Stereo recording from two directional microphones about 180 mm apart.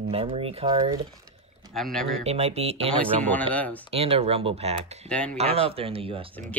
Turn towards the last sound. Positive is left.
turn(degrees=-30)  # may be behind; listen again after turning